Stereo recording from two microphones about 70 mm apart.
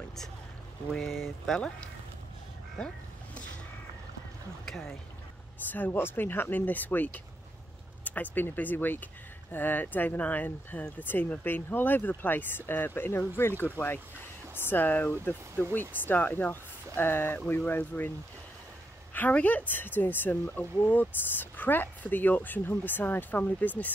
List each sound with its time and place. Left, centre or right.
0.9 s speech: centre
4.6 s speech: centre
5.7 s speech: left
19.1 s speech: left